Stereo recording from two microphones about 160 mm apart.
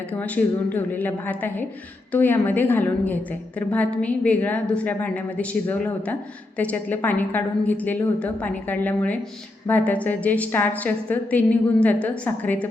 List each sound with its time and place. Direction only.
0.1 s a woman's voice: 10° left (ahead or behind)